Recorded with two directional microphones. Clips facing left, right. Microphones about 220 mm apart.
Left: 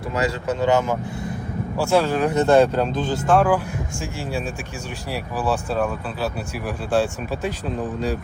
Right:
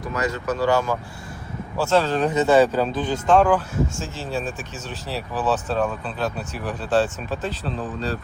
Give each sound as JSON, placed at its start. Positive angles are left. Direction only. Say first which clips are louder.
{"t": 0.1, "sound": "speech", "louder": "left 2 dB", "side_deg": 30}
{"t": 2.4, "sound": "speech", "louder": "left 1 dB", "side_deg": -5}
{"t": 3.2, "sound": "speech", "louder": "right 1 dB", "side_deg": 5}
{"t": 5.1, "sound": "speech", "louder": "even", "side_deg": 10}